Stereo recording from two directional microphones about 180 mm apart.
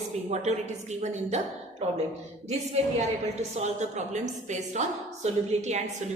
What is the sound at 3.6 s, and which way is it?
A woman's voice, 40° right (ahead or behind).